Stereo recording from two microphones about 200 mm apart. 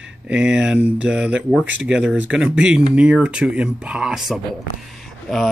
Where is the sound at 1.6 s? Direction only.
70° right (ahead or behind).